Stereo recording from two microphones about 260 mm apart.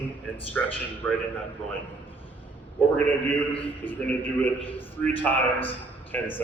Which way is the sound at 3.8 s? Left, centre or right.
Centre.